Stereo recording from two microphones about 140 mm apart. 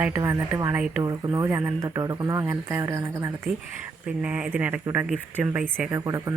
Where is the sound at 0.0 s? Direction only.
20° right (ahead or behind).